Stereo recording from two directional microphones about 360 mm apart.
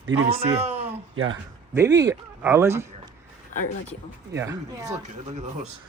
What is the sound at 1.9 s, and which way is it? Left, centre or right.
Speech, centre.